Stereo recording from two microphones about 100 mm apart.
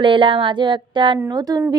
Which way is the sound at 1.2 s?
40° right (ahead or behind).